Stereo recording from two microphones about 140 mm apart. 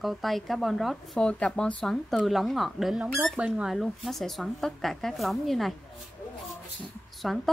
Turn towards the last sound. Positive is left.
turn(degrees=0)  # may be behind; listen again after turning